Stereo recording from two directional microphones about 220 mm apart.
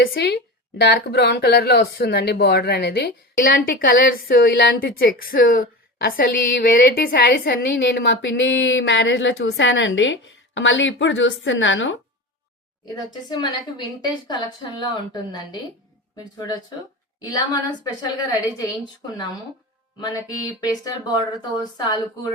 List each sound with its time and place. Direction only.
0.0 s speech: 45° left (ahead or behind)
13.3 s a woman's voice: 20° left (ahead or behind)